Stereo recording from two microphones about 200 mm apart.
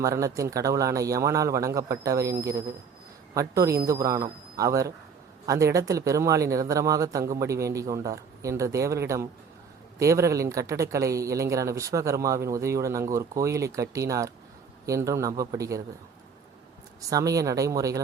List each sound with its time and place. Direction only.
0.0 s speech: 15° right (ahead or behind)
17.1 s speech: 15° right (ahead or behind)